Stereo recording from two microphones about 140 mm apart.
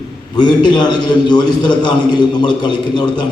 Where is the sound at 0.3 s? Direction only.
35° left (ahead or behind).